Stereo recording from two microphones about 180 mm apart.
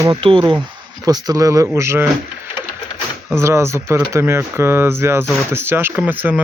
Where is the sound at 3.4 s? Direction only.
15° right (ahead or behind).